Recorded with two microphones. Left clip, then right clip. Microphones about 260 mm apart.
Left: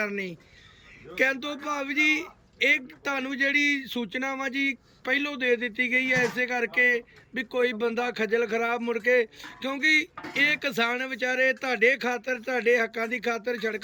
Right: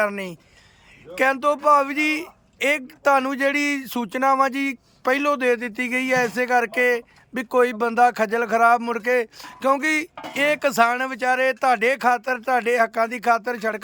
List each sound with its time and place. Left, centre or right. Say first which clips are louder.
0.0 s speech: right 7 dB; centre